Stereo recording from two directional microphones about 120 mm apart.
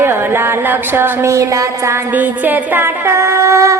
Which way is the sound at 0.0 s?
20° right (ahead or behind).